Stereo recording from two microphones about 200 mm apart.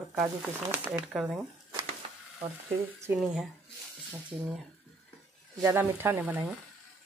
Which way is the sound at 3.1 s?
Centre (ahead or behind).